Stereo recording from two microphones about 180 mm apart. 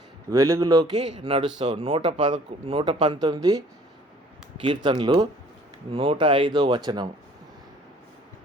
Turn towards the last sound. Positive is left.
turn(degrees=-25)  # may be behind; listen again after turning